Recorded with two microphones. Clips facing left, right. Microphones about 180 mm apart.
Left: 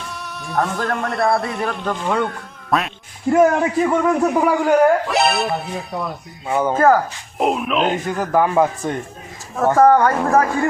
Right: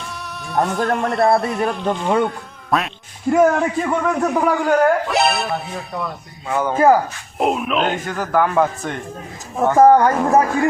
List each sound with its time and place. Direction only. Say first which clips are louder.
0.0 s music: even; centre (ahead or behind)
1.1 s speech: right 3 dB; 25° right (ahead or behind)
1.5 s speech: right 3 dB; centre (ahead or behind)
6.5 s a man's voice: left 2 dB; 15° left (ahead or behind)
6.7 s speech: right 1 dB; 10° right (ahead or behind)
7.3 s speech: even; centre (ahead or behind)
8.1 s a man's voice: even; 20° left (ahead or behind)
9.7 s speech: right 2 dB; 20° right (ahead or behind)
10.1 s speech: right 1 dB; 5° right (ahead or behind)